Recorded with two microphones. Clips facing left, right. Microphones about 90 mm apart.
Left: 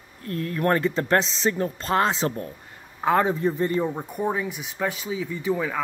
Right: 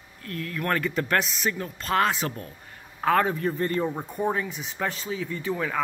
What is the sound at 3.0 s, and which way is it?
Speech, 15° left (ahead or behind).